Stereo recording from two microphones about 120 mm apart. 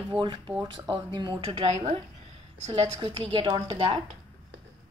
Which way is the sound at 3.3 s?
40° right (ahead or behind).